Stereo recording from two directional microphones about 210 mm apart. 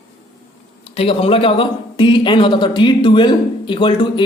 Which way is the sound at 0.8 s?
30° left (ahead or behind).